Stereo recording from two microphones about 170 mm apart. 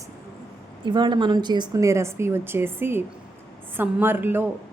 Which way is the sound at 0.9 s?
25° right (ahead or behind).